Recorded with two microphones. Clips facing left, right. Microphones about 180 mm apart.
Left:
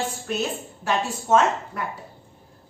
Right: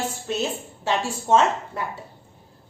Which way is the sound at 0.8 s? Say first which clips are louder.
Right 1 dB; 30° right (ahead or behind).